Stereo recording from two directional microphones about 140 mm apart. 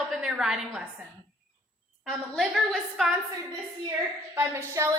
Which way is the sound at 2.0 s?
Centre (ahead or behind).